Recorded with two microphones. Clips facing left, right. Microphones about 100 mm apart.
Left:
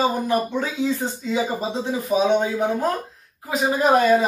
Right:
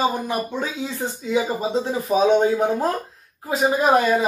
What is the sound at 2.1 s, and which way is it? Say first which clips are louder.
Speech: right 3 dB; 35° right (ahead or behind).